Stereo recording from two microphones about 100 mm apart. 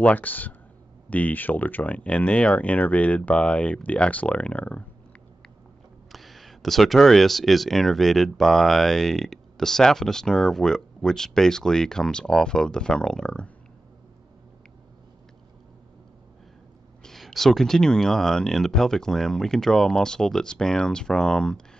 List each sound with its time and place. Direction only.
0.0 s speech: 15° left (ahead or behind)
6.1 s speech: centre (ahead or behind)
17.0 s speech: centre (ahead or behind)